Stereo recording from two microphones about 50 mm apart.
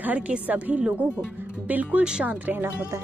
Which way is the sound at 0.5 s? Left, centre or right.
Right.